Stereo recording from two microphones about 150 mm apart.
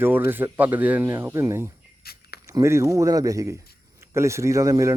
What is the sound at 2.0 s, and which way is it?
Speech, 90° left.